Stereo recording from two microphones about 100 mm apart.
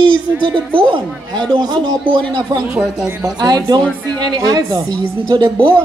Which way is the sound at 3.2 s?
45° right (ahead or behind).